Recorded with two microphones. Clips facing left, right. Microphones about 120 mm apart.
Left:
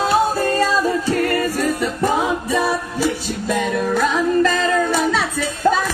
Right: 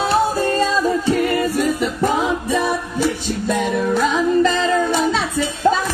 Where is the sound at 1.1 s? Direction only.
10° right (ahead or behind).